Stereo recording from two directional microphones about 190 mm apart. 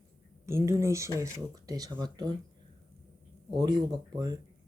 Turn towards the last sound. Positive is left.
turn(degrees=-20)  # may be behind; listen again after turning